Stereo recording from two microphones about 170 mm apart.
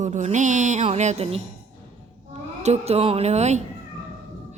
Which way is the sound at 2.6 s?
40° right (ahead or behind).